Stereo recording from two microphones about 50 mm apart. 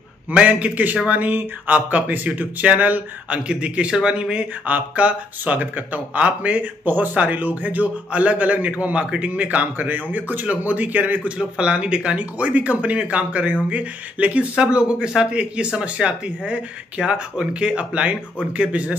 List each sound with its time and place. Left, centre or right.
0.3 s speech: right
11.3 s speech: centre